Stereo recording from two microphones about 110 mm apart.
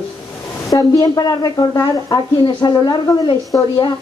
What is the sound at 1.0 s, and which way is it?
Speech, 35° left (ahead or behind).